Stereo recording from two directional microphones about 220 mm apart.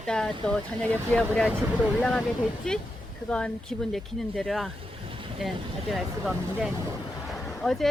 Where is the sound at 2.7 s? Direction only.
5° left (ahead or behind).